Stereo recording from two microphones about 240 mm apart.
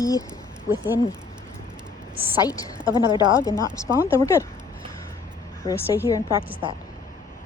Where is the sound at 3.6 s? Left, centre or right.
Centre.